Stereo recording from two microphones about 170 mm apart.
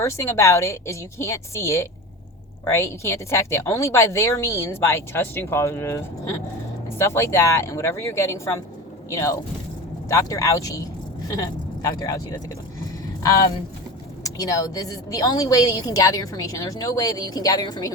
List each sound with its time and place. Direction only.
0.0 s speech: 15° left (ahead or behind)
7.0 s a woman's voice: 15° left (ahead or behind)